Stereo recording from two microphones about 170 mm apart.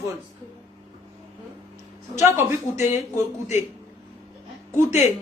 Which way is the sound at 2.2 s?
15° right (ahead or behind).